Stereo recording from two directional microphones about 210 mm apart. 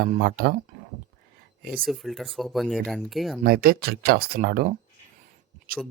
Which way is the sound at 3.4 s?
45° right (ahead or behind).